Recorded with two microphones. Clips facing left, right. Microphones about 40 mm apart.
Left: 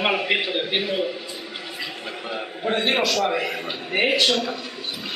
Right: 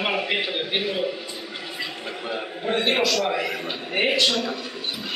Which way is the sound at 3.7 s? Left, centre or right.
Centre.